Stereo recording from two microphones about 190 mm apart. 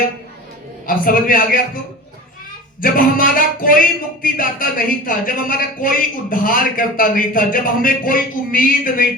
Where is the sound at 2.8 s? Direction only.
50° left (ahead or behind).